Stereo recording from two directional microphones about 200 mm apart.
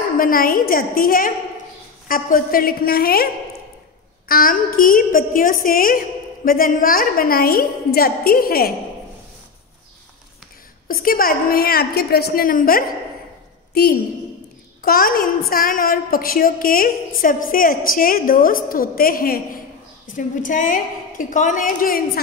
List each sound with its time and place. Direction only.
0.2 s a woman's voice: 45° left (ahead or behind)
4.3 s a woman's voice: 45° left (ahead or behind)
10.9 s a woman's voice: 45° left (ahead or behind)
14.8 s a woman's voice: 45° left (ahead or behind)